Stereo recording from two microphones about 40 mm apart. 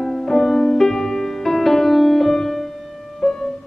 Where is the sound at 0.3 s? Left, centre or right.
Centre.